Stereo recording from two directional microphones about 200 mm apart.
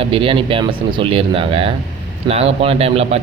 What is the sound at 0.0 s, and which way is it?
A man's voice, 25° right (ahead or behind).